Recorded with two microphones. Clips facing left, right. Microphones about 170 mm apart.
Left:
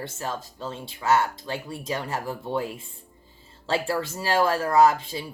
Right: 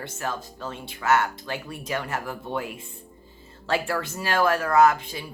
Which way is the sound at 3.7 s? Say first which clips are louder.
Left 1 dB; 30° left (ahead or behind).